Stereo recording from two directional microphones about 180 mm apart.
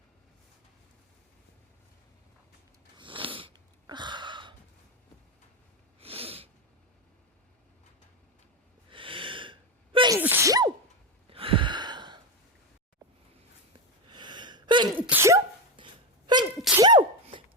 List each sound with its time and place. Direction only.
3.0 s sniff: 30° right (ahead or behind)
6.0 s sneeze: 35° right (ahead or behind)
8.9 s sneeze: 30° right (ahead or behind)
10.2 s sneeze: 10° right (ahead or behind)
11.3 s gasp: 30° right (ahead or behind)
14.1 s gasp: 25° right (ahead or behind)
15.0 s sneeze: 15° right (ahead or behind)
15.7 s a sound: 25° right (ahead or behind)
16.6 s sneeze: 5° right (ahead or behind)